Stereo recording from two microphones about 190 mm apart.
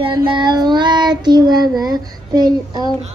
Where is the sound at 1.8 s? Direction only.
20° right (ahead or behind).